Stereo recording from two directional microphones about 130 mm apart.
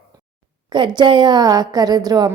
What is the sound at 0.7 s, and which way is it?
A woman's voice, 35° right (ahead or behind).